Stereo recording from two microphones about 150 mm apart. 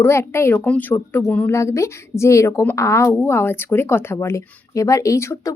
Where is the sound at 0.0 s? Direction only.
15° left (ahead or behind).